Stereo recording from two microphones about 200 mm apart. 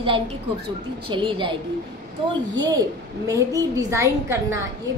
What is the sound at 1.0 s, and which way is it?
Speech, 25° right (ahead or behind).